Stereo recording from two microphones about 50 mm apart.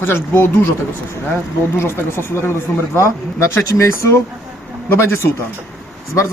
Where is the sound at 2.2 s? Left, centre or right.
Left.